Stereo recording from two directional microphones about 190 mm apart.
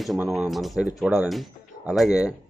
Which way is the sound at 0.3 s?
Centre (ahead or behind).